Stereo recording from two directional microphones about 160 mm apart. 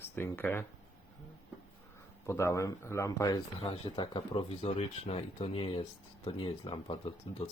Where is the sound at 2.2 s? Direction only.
20° left (ahead or behind).